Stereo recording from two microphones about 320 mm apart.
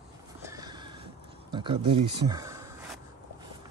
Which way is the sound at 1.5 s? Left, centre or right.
Centre.